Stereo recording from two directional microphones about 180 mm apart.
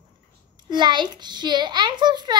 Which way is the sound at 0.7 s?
25° right (ahead or behind).